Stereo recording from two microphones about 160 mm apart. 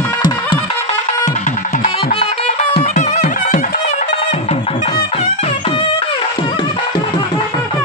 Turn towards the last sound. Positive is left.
turn(degrees=35)  # may be behind; listen again after turning